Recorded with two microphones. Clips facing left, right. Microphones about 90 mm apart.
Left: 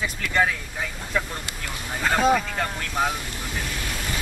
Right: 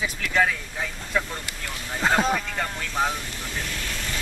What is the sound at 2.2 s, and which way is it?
Speech, 5° left (ahead or behind).